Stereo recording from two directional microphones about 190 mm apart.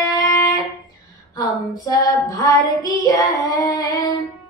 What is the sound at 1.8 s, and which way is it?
Female singing, 20° left (ahead or behind).